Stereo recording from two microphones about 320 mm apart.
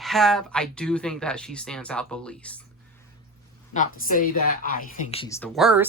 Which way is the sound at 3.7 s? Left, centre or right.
Left.